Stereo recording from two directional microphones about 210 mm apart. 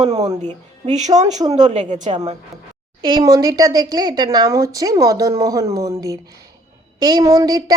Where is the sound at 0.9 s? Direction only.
35° right (ahead or behind).